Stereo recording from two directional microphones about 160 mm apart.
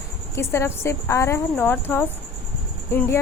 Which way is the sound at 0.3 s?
15° left (ahead or behind).